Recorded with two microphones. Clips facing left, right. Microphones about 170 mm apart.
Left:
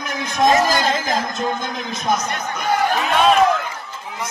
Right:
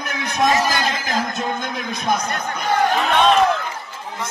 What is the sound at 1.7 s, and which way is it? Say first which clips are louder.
Speech: even; 60° right (ahead or behind).